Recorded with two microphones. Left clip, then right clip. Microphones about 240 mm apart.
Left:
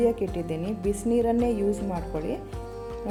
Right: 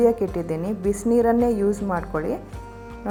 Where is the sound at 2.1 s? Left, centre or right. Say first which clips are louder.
Right 3 dB; right.